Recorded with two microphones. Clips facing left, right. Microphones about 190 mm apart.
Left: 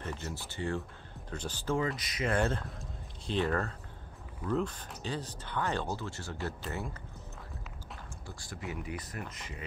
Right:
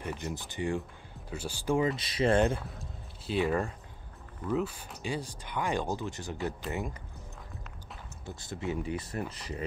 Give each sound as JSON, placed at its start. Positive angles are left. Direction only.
{"t": 0.0, "sound": "speech", "side_deg": -15}
{"t": 1.9, "sound": "speech", "side_deg": -30}
{"t": 2.4, "sound": "speech", "side_deg": -10}
{"t": 8.3, "sound": "speech", "side_deg": -20}